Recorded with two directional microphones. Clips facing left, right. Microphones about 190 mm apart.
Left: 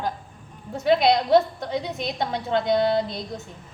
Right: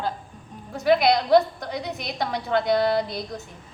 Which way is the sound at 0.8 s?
25° left (ahead or behind).